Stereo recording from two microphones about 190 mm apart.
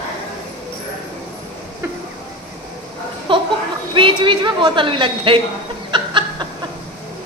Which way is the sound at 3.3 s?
25° right (ahead or behind).